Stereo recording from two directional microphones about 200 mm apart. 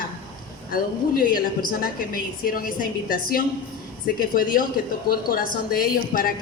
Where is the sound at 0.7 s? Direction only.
45° left (ahead or behind).